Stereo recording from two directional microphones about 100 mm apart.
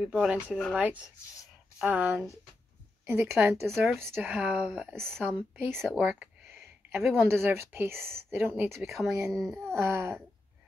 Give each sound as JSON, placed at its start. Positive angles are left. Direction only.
{"t": 0.0, "sound": "speech", "side_deg": -10}
{"t": 3.6, "sound": "a child's voice", "side_deg": 0}
{"t": 4.0, "sound": "speech", "side_deg": -25}
{"t": 4.3, "sound": "speech", "side_deg": -10}
{"t": 4.9, "sound": "a child's voice", "side_deg": 5}
{"t": 5.2, "sound": "speech", "side_deg": -15}
{"t": 7.1, "sound": "speech", "side_deg": -25}
{"t": 9.2, "sound": "a child's voice", "side_deg": 0}
{"t": 9.8, "sound": "speech", "side_deg": -25}